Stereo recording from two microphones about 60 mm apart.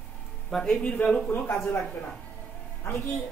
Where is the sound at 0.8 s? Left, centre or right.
Centre.